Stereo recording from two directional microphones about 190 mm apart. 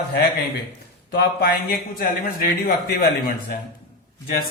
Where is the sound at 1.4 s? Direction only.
50° left (ahead or behind).